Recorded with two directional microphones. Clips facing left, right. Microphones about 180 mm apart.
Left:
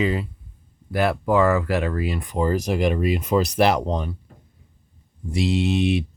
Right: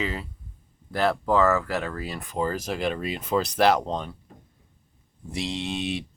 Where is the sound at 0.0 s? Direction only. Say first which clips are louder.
Left 7 dB; 15° left (ahead or behind).